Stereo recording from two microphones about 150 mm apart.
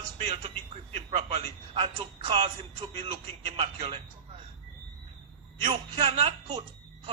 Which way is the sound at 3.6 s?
40° right (ahead or behind).